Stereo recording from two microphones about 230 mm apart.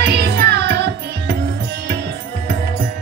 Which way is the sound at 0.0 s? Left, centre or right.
Right.